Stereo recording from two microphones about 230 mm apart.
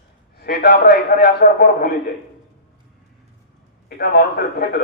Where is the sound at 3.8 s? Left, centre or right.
Left.